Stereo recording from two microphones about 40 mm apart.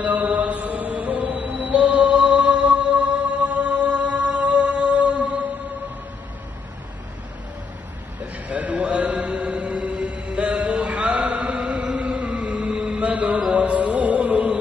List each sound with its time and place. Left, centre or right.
0.0 s mantra: right
1.8 s music: right
8.5 s a sound: right
8.8 s chant: right
11.7 s a sound: right
12.9 s music: right